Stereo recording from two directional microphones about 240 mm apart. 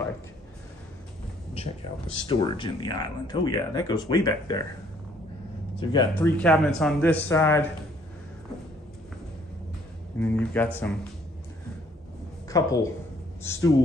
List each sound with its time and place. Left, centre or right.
1.5 s speech: left
5.8 s speech: centre
6.3 s speech: centre
10.1 s speech: centre
12.4 s a woman's voice: centre